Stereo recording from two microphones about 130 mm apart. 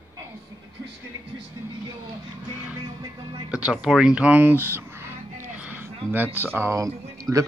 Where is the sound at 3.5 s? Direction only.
5° right (ahead or behind).